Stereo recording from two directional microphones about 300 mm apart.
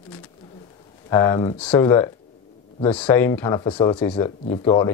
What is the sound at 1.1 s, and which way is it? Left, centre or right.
Speech, centre.